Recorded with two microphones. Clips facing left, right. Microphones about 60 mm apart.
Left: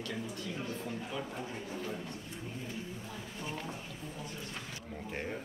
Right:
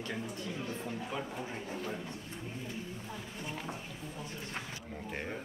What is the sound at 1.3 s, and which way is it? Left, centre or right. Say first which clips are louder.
Speech: right 1 dB; right.